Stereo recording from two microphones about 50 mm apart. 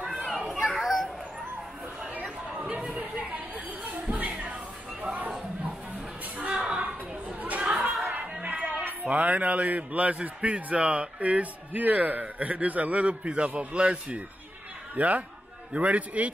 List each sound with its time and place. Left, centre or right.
0.7 s children playing: centre
2.1 s chatter: right
2.6 s chatter: right
4.1 s music: right
5.0 s a sound: right
6.4 s a sound: centre
7.4 s chatter: right
8.1 s a sound: right
9.0 s a man's voice: right